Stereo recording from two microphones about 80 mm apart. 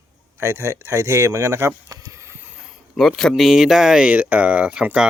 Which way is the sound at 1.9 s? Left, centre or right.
Right.